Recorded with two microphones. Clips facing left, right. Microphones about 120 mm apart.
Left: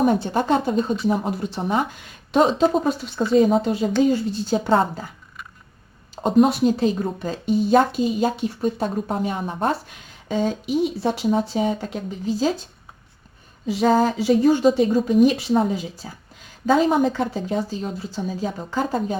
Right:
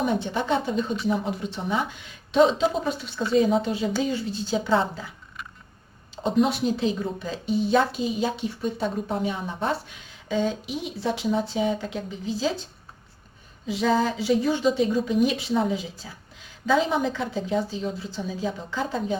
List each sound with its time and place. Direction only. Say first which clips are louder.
0.0 s a woman's voice: left 6 dB; 45° left (ahead or behind)
6.2 s a woman's voice: left 6 dB; 45° left (ahead or behind)
10.7 s speech: left 10 dB; 5° left (ahead or behind)
11.0 s a woman's voice: left 4 dB; 40° left (ahead or behind)
13.7 s a woman's voice: left 5 dB; 45° left (ahead or behind)